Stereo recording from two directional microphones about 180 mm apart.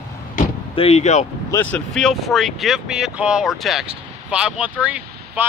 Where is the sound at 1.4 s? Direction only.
15° left (ahead or behind).